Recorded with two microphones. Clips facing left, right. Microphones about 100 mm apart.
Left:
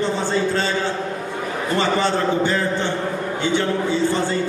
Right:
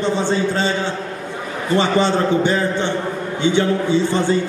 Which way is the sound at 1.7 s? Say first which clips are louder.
Right 4 dB; 20° right (ahead or behind).